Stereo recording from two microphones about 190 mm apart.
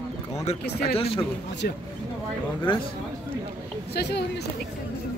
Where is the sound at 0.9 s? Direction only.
30° left (ahead or behind).